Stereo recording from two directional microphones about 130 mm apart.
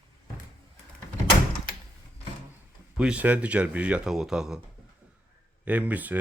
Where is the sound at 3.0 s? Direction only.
10° right (ahead or behind).